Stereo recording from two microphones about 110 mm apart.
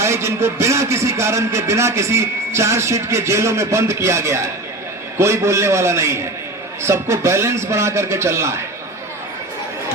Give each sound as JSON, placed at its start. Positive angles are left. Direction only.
{"t": 0.0, "sound": "a man's voice", "side_deg": -25}